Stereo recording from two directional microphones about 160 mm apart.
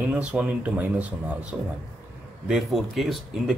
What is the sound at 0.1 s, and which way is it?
Speech, 10° right (ahead or behind).